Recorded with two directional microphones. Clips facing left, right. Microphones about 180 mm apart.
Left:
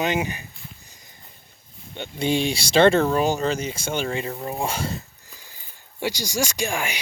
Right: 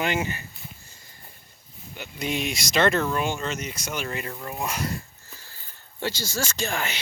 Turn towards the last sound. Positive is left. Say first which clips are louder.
# left 2 dB
turn(degrees=10)  # may be behind; listen again after turning